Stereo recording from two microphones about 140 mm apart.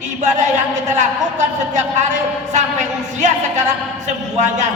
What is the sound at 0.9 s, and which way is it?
A man's voice, 60° right (ahead or behind).